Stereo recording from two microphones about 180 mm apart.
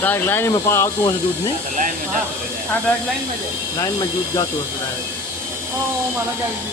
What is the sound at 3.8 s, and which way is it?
Speech, 20° left (ahead or behind).